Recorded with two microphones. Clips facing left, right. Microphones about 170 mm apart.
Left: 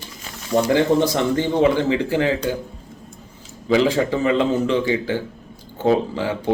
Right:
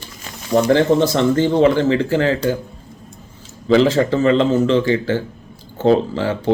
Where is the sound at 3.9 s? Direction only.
15° left (ahead or behind).